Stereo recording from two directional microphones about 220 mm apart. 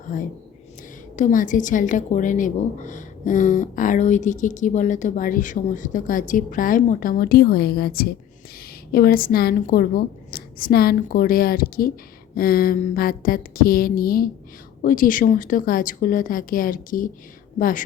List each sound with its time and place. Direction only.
1.1 s a woman's voice: 35° left (ahead or behind)